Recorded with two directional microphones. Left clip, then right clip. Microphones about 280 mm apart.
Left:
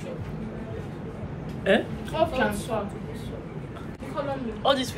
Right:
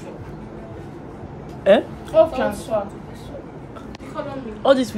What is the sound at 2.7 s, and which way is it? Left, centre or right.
Speech, right.